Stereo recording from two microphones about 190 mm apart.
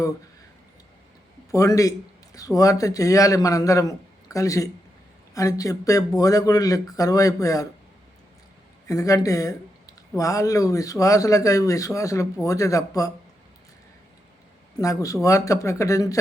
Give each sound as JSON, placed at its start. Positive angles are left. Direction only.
{"t": 1.5, "sound": "a man's voice", "side_deg": 15}
{"t": 8.9, "sound": "speech", "side_deg": 15}
{"t": 14.8, "sound": "speech", "side_deg": 15}